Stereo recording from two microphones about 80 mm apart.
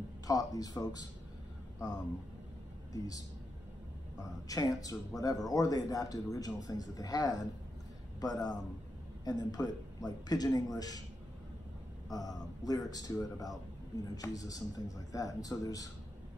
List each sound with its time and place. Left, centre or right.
0.3 s speech: left
2.9 s a man's voice: left
12.1 s speech: left